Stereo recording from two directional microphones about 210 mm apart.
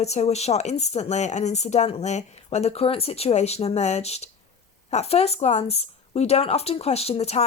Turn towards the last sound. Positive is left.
turn(degrees=30)  # may be behind; listen again after turning